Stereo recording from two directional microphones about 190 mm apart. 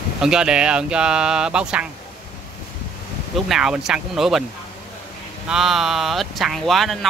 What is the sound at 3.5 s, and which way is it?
Speech, 5° right (ahead or behind).